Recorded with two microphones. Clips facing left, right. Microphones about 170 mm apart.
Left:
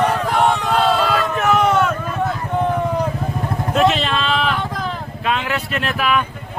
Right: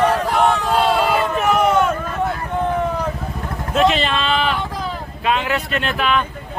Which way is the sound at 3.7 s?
Centre (ahead or behind).